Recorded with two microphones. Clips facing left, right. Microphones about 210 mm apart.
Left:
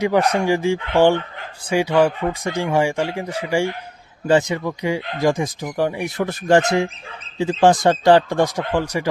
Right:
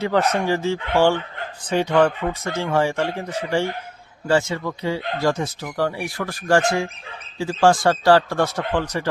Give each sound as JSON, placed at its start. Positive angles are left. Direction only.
{"t": 0.0, "sound": "speech", "side_deg": 15}